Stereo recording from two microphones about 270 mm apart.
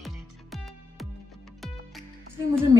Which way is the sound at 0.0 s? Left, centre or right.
Centre.